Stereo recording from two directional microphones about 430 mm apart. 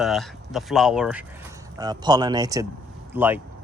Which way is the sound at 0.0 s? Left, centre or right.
Centre.